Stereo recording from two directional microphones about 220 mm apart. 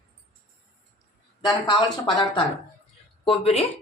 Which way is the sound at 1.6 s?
20° left (ahead or behind).